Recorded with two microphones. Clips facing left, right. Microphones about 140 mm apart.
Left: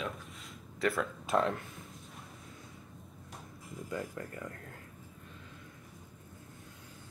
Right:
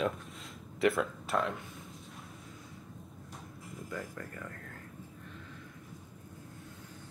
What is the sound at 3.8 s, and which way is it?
Speech, 25° left (ahead or behind).